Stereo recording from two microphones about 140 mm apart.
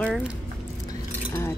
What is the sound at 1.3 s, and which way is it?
Speech, 20° left (ahead or behind).